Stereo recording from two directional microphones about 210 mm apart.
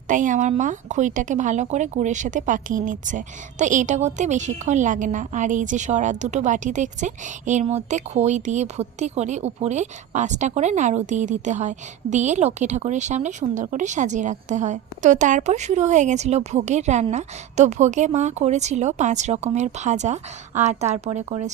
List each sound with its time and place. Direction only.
0.1 s speech: 35° right (ahead or behind)